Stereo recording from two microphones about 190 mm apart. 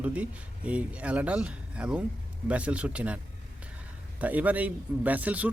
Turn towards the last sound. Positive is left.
turn(degrees=-10)  # may be behind; listen again after turning